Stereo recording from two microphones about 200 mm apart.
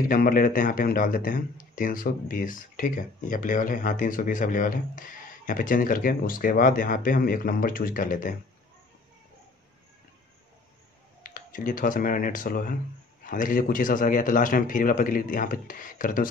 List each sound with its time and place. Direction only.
0.1 s speech: 45° left (ahead or behind)
11.2 s speech: 45° left (ahead or behind)